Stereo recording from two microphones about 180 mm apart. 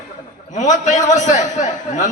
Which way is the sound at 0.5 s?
40° left (ahead or behind).